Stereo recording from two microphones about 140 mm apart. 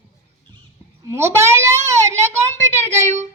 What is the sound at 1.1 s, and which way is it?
Speech, 20° right (ahead or behind).